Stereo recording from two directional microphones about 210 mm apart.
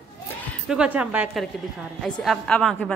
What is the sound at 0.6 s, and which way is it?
A woman's voice, 5° right (ahead or behind).